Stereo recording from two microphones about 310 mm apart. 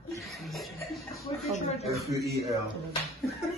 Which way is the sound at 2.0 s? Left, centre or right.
Centre.